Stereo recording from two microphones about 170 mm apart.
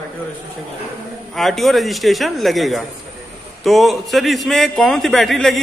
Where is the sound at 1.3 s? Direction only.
Centre (ahead or behind).